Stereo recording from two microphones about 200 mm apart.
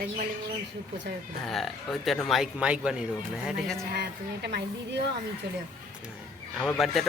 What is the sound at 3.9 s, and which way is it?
A woman's voice, 55° right (ahead or behind).